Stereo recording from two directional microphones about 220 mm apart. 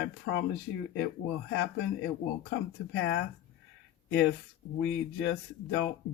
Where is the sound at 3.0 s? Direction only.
50° left (ahead or behind).